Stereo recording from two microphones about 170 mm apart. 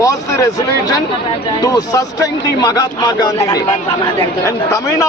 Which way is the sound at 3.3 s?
20° left (ahead or behind).